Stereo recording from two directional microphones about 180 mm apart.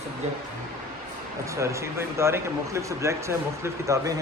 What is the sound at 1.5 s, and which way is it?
Speech, 15° right (ahead or behind).